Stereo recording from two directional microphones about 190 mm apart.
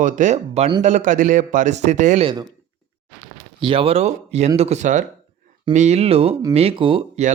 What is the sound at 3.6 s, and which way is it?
Speech, 25° right (ahead or behind).